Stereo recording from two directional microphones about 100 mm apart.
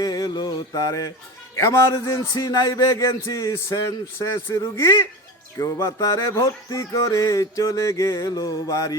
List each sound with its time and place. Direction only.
0.0 s mantra: 40° left (ahead or behind)
1.5 s a man's voice: 30° left (ahead or behind)